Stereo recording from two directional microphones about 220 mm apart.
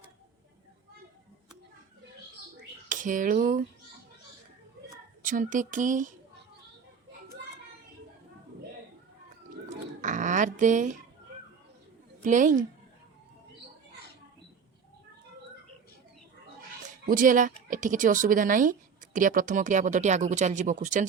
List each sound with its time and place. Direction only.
2.9 s speech: 35° right (ahead or behind)
5.2 s a woman's voice: 35° right (ahead or behind)
9.6 s a sound: 35° right (ahead or behind)
12.2 s a woman's voice: 35° right (ahead or behind)
17.1 s a woman's voice: 35° right (ahead or behind)